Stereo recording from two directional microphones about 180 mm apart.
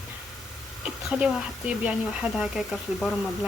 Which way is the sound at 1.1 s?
5° right (ahead or behind).